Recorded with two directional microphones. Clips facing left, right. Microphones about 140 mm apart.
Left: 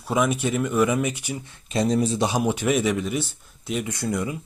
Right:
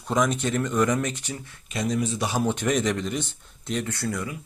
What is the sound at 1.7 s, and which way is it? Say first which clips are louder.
Speech: left 5 dB; 30° left (ahead or behind).